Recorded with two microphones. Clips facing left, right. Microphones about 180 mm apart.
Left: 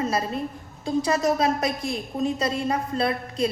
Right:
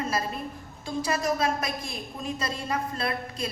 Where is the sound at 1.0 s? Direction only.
35° left (ahead or behind).